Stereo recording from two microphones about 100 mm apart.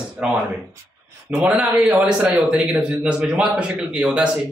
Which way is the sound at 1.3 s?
10° right (ahead or behind).